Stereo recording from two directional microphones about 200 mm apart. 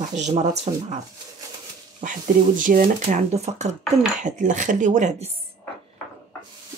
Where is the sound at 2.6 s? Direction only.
45° right (ahead or behind).